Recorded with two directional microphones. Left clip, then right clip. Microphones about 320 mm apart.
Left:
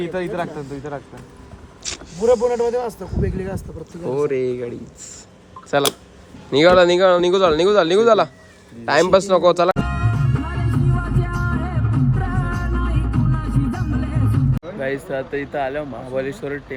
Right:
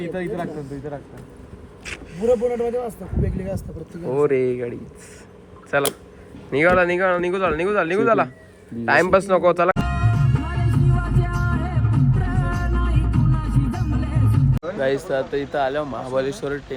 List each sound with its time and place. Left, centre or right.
0.0 s a man's voice: left
1.8 s a sound: centre
4.1 s speech: centre
5.7 s speech: centre
8.8 s music: centre
14.8 s speech: centre